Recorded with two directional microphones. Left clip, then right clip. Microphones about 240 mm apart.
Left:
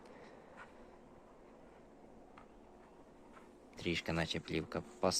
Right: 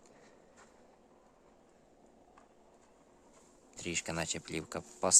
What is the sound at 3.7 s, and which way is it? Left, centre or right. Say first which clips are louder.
Speech: right 1 dB; centre.